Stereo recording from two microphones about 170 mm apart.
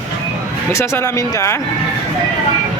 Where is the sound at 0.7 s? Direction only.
15° left (ahead or behind).